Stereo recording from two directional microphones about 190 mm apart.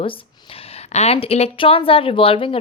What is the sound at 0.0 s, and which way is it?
A woman's voice, 30° left (ahead or behind).